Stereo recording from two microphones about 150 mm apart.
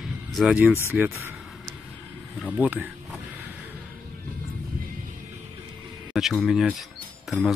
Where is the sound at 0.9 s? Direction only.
15° right (ahead or behind).